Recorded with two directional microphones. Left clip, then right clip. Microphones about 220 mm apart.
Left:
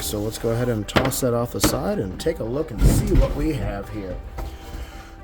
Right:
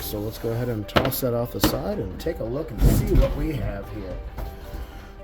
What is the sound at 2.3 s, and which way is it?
Speech, 35° left (ahead or behind).